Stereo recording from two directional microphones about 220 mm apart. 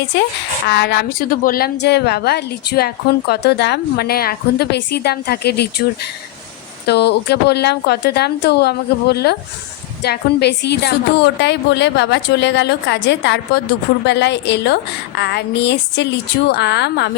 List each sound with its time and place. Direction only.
0.7 s a woman's voice: 50° left (ahead or behind)
6.8 s a woman's voice: 50° left (ahead or behind)